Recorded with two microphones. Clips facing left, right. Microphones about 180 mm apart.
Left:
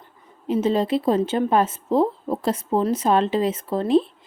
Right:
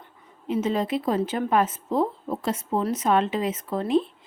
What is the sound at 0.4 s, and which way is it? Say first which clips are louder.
A woman's voice: left 4 dB; 35° left (ahead or behind).